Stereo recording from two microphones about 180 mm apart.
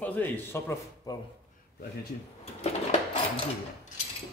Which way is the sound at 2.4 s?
35° left (ahead or behind).